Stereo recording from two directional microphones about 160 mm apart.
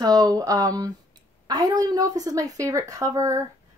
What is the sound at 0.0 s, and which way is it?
Speech, 25° right (ahead or behind).